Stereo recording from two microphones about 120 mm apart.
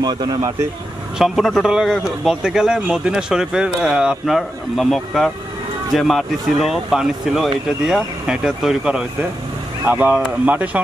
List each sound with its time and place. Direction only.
0.0 s speech: 35° right (ahead or behind)
1.1 s a man's voice: 5° right (ahead or behind)